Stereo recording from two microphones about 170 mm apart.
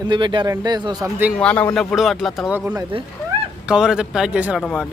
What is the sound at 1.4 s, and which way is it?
Speech, 10° left (ahead or behind).